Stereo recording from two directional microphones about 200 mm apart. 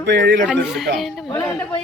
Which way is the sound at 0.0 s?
55° right (ahead or behind).